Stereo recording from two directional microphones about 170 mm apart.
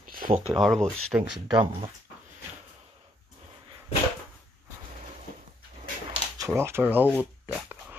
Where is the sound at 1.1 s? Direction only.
15° right (ahead or behind).